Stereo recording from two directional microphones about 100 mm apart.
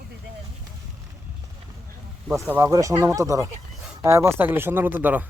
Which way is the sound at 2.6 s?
35° right (ahead or behind).